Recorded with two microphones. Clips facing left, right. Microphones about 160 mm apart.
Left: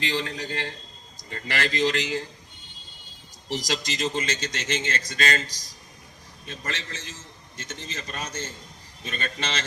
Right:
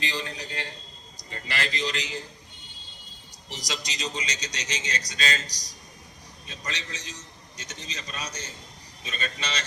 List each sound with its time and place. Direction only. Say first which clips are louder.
0.2 s a man's voice: left 4 dB; 50° left (ahead or behind)
3.7 s a man's voice: left 4 dB; 50° left (ahead or behind)
6.5 s a man's voice: left 3 dB; 55° left (ahead or behind)